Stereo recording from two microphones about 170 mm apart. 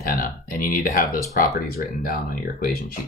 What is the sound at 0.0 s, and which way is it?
Speech, 55° left (ahead or behind).